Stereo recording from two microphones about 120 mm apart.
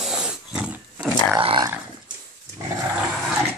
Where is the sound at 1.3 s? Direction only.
40° right (ahead or behind).